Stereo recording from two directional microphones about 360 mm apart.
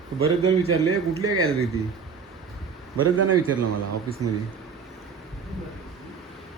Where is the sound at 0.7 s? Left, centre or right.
Right.